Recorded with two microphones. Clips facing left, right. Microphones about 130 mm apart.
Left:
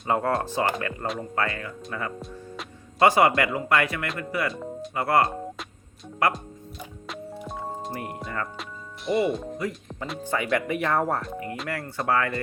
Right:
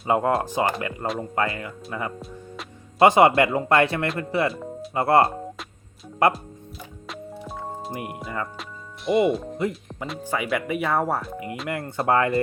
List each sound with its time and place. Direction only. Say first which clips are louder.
0.1 s speech: right 3 dB; 15° right (ahead or behind)
2.1 s music: even; centre (ahead or behind)
3.0 s speech: right 4 dB; 25° right (ahead or behind)
4.5 s speech: even; 5° right (ahead or behind)
4.9 s speech: right 4 dB; 25° right (ahead or behind)
7.1 s music: even; centre (ahead or behind)
7.9 s speech: right 4 dB; 10° right (ahead or behind)
9.0 s speech: right 4 dB; centre (ahead or behind)
9.6 s speech: right 4 dB; 25° right (ahead or behind)
10.2 s speech: even; 5° right (ahead or behind)
11.7 s speech: right 4 dB; 20° right (ahead or behind)